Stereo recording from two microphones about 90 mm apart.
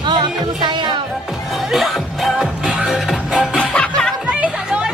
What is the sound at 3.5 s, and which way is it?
Music, 10° left (ahead or behind).